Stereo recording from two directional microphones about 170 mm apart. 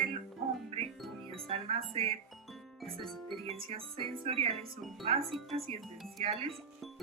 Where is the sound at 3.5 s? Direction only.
30° right (ahead or behind).